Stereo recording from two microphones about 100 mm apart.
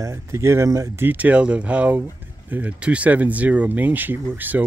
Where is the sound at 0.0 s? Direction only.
30° right (ahead or behind).